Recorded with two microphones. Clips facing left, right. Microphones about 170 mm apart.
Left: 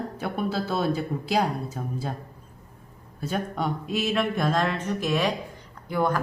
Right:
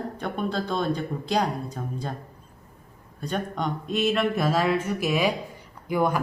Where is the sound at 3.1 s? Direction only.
5° left (ahead or behind).